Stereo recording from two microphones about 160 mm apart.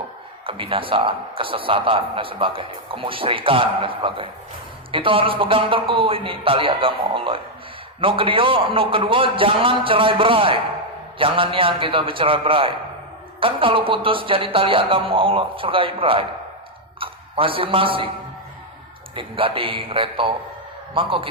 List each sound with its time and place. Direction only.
0.4 s a man's voice: 35° right (ahead or behind)
19.1 s a man's voice: 35° right (ahead or behind)